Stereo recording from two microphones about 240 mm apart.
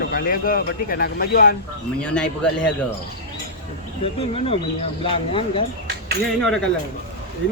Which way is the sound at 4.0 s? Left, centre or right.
Left.